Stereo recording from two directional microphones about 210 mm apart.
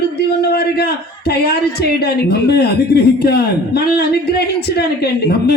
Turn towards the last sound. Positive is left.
turn(degrees=50)  # may be behind; listen again after turning